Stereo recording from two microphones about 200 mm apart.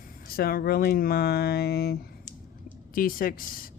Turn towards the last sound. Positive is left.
turn(degrees=45)  # may be behind; listen again after turning